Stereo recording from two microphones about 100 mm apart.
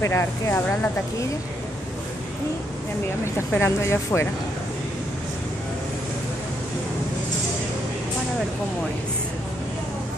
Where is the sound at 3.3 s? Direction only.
25° left (ahead or behind).